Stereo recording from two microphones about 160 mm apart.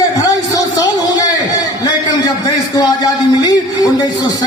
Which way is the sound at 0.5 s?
20° left (ahead or behind).